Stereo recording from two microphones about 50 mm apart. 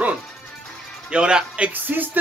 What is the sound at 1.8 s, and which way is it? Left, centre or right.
Speech, right.